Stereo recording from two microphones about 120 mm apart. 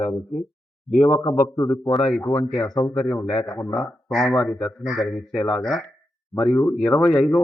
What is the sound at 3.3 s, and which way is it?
Speech, 30° left (ahead or behind).